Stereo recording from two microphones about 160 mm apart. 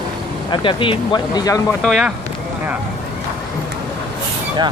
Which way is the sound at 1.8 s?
Centre (ahead or behind).